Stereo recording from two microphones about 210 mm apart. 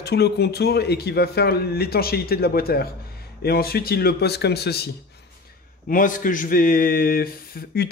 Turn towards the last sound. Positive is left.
turn(degrees=45)  # may be behind; listen again after turning